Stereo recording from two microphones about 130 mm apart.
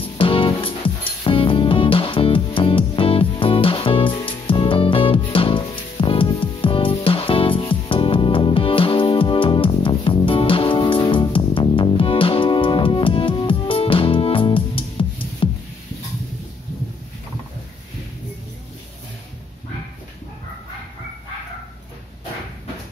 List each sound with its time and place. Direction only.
0.2 s music: 40° left (ahead or behind)